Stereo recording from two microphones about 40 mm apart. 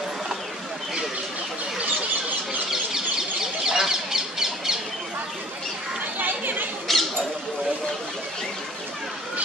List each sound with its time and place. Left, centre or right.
3.6 s bird: centre
6.1 s chatter: right
6.9 s squawk: centre